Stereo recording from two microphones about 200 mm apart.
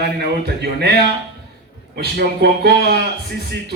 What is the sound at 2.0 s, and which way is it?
A man's voice, 55° right (ahead or behind).